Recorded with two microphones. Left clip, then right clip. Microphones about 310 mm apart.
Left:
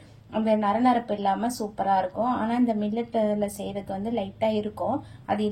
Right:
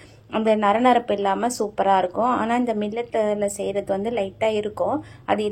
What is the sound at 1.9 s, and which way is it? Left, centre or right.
Speech, right.